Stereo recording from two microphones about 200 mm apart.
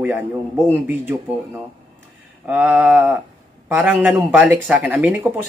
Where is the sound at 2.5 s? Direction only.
5° right (ahead or behind).